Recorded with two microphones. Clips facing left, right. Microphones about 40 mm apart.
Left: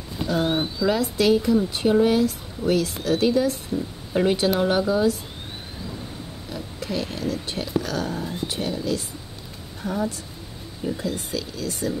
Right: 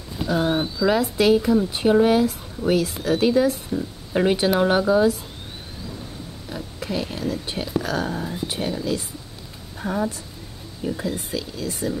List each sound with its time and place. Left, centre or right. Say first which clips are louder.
0.1 s bird: right 1 dB; centre
0.5 s speech: right 1 dB; centre
0.8 s speech: right 2 dB; centre
6.5 s a woman's voice: right 1 dB; centre